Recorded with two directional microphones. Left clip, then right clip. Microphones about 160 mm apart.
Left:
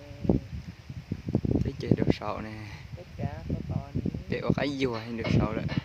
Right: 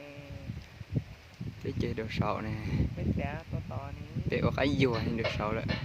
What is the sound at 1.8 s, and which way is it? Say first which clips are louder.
Speech: left 4 dB; 5° right (ahead or behind).